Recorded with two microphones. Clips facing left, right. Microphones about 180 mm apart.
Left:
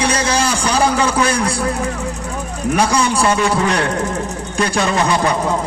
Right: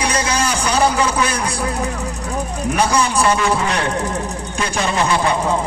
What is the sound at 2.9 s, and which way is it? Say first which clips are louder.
Speech: left 1 dB; 30° left (ahead or behind).